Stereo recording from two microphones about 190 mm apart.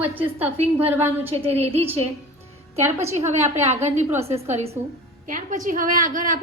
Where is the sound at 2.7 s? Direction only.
15° right (ahead or behind).